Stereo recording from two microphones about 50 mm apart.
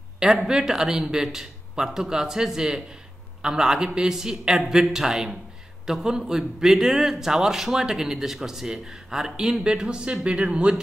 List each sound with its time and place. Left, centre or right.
0.2 s a man's voice: centre